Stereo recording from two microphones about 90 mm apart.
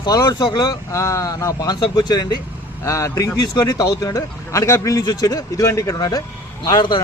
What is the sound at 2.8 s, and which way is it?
A man's voice, 35° left (ahead or behind).